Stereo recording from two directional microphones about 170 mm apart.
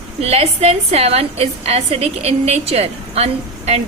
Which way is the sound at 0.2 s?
40° right (ahead or behind).